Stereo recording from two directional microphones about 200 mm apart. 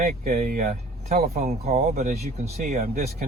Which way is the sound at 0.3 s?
45° right (ahead or behind).